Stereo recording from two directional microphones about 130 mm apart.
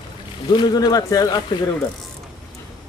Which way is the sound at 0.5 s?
35° left (ahead or behind).